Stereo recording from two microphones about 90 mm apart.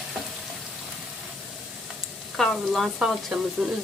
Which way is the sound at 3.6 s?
10° right (ahead or behind).